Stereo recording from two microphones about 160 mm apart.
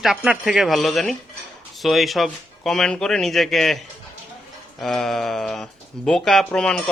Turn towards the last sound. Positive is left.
turn(degrees=5)  # may be behind; listen again after turning